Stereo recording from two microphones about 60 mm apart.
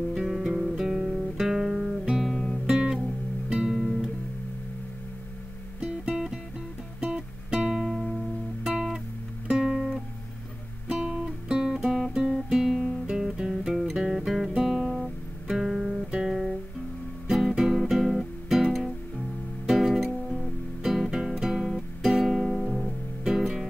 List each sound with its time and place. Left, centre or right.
0.1 s music: centre
2.2 s guitar: centre
2.6 s music: centre
5.8 s music: centre
8.6 s guitar: centre
13.1 s music: centre
14.6 s guitar: centre
15.4 s music: centre